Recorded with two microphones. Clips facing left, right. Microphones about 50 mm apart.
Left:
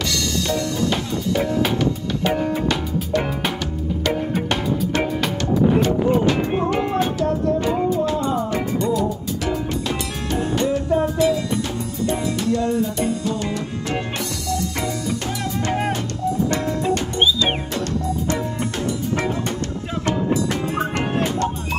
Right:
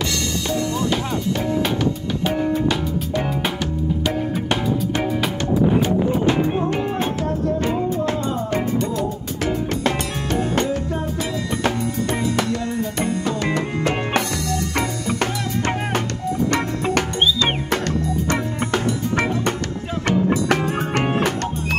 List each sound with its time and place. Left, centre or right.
0.5 s music: right
2.2 s music: centre
4.3 s music: centre
7.0 s music: right
10.5 s music: right
11.6 s music: right
18.3 s music: right